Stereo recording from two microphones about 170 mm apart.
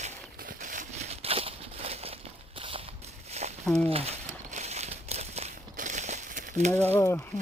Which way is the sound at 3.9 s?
35° right (ahead or behind).